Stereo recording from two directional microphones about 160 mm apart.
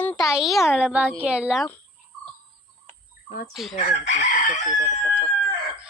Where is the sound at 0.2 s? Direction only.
Centre (ahead or behind).